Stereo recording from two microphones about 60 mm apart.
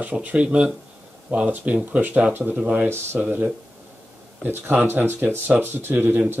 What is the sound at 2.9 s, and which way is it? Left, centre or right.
Speech, right.